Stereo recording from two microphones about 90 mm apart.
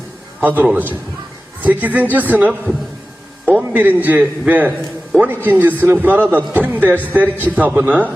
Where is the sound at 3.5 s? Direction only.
15° right (ahead or behind).